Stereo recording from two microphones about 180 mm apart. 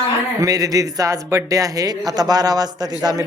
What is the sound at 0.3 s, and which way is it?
Speech, 20° right (ahead or behind).